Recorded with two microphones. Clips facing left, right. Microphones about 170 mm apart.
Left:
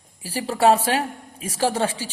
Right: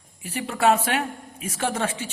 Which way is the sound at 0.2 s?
35° left (ahead or behind).